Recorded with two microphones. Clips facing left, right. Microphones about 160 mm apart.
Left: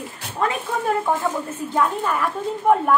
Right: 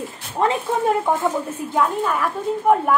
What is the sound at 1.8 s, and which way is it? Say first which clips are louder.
Speech: right 1 dB; centre (ahead or behind).